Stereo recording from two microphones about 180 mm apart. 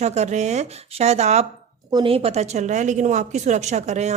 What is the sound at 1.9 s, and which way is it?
Speech, 25° right (ahead or behind).